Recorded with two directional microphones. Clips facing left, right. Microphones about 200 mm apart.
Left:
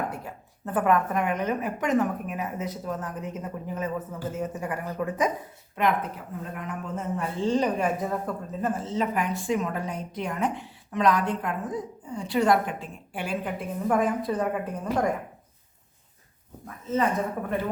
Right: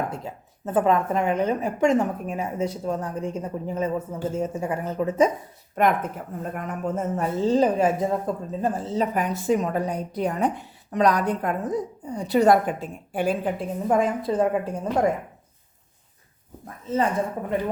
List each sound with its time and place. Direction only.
0.1 s a woman's voice: 25° right (ahead or behind)
5.7 s a woman's voice: 45° right (ahead or behind)
13.8 s a woman's voice: 25° right (ahead or behind)